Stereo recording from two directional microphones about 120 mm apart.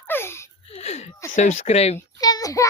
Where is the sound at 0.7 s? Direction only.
65° left (ahead or behind).